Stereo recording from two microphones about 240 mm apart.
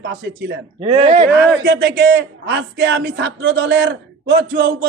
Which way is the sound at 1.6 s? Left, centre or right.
Right.